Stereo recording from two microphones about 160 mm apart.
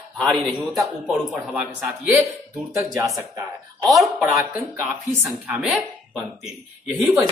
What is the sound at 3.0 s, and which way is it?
Speech, 20° right (ahead or behind).